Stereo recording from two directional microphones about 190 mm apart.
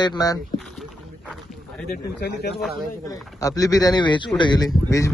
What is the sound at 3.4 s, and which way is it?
A man's voice, 20° left (ahead or behind).